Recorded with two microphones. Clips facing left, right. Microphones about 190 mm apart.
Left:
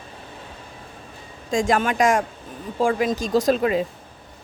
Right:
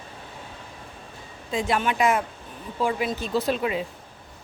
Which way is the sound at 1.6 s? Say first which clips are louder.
Left 3 dB; 45° left (ahead or behind).